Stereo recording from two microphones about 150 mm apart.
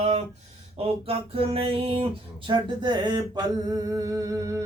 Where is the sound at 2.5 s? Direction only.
30° right (ahead or behind).